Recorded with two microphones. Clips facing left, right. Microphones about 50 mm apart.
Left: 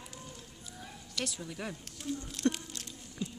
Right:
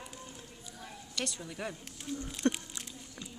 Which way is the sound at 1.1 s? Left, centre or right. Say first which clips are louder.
Even; centre.